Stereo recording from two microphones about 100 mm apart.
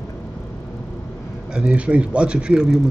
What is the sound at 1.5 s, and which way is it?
Speech, 10° right (ahead or behind).